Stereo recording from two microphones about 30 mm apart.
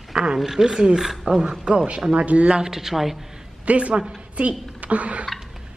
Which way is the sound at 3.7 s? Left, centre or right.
Right.